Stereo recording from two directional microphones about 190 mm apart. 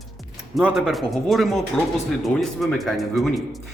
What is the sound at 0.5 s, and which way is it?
Speech, centre (ahead or behind).